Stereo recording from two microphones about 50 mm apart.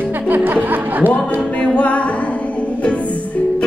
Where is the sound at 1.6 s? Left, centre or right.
Left.